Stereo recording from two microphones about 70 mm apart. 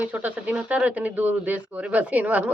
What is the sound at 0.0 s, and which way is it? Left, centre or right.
A woman's voice, right.